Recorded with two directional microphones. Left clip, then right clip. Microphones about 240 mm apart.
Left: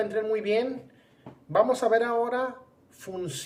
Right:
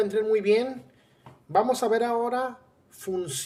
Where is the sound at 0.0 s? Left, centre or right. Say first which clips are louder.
Right 4 dB; right.